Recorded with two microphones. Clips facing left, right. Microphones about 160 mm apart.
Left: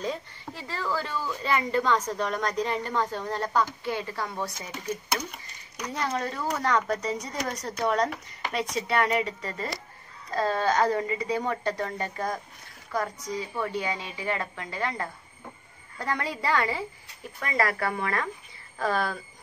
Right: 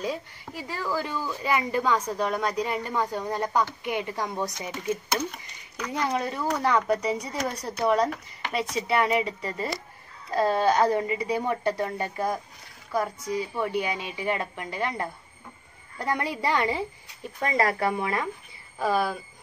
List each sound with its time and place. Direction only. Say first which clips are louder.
0.0 s a woman's voice: right 1 dB; 10° right (ahead or behind)
5.9 s a woman's voice: right 2 dB; 10° right (ahead or behind)